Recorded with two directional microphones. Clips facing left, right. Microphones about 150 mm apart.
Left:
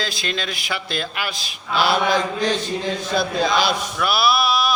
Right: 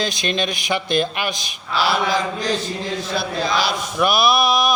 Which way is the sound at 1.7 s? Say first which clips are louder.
Left 1 dB; 50° left (ahead or behind).